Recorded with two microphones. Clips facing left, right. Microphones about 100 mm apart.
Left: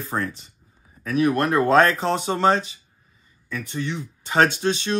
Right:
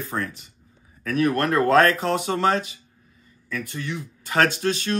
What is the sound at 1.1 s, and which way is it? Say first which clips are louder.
Speech: left 1 dB; 15° left (ahead or behind).